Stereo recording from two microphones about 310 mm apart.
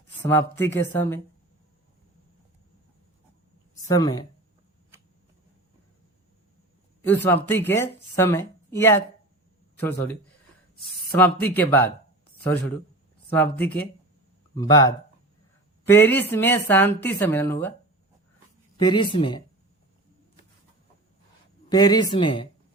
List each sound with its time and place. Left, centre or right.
0.2 s speech: centre
3.8 s speech: centre
7.0 s a man's voice: centre
11.2 s speech: centre
18.8 s speech: centre
21.7 s speech: centre